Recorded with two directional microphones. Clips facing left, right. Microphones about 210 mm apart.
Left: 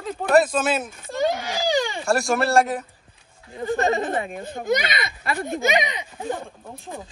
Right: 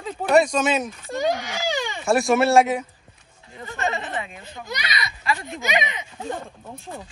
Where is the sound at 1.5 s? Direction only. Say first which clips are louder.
Left 4 dB; 35° left (ahead or behind).